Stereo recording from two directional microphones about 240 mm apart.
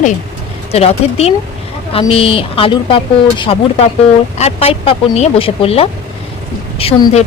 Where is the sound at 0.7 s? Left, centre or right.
Left.